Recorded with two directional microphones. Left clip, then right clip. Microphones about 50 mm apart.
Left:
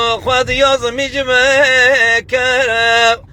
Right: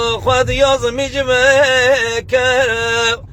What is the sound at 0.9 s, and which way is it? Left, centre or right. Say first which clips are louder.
Music: left 1 dB; right.